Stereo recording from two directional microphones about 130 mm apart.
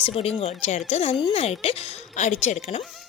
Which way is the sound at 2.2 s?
65° left (ahead or behind).